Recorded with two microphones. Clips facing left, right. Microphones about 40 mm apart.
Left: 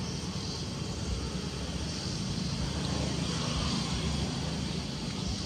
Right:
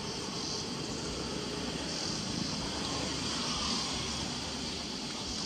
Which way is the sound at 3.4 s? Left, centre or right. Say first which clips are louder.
Left 2 dB; left.